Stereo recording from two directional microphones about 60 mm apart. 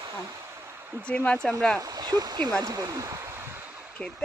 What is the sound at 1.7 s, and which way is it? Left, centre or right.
Speech, right.